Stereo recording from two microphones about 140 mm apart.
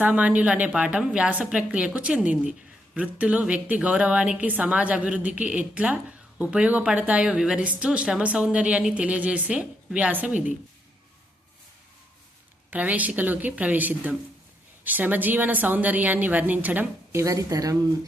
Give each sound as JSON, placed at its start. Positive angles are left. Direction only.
{"t": 0.0, "sound": "a woman's voice", "side_deg": -10}
{"t": 12.7, "sound": "a woman's voice", "side_deg": -10}